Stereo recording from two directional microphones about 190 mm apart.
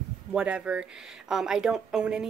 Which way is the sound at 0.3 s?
5° right (ahead or behind).